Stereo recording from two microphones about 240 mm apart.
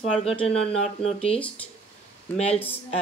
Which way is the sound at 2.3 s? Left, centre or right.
Left.